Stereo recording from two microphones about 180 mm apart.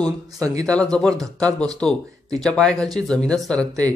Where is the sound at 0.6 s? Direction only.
5° left (ahead or behind).